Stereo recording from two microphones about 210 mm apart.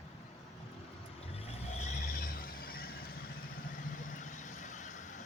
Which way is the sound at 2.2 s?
45° left (ahead or behind).